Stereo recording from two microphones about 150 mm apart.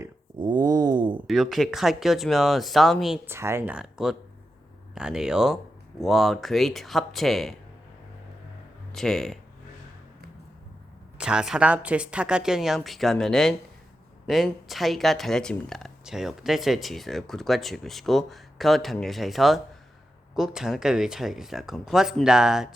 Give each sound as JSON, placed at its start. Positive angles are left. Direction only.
{"t": 0.3, "sound": "a sound", "side_deg": -30}
{"t": 1.3, "sound": "speech", "side_deg": 0}
{"t": 3.2, "sound": "speech", "side_deg": -15}
{"t": 3.8, "sound": "speech", "side_deg": -5}
{"t": 8.9, "sound": "speech", "side_deg": 5}
{"t": 11.2, "sound": "speech", "side_deg": -5}